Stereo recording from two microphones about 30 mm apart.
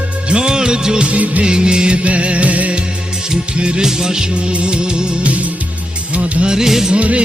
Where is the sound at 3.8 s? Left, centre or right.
Right.